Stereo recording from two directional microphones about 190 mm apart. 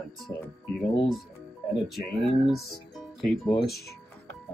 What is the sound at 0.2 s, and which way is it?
Speech, 5° left (ahead or behind).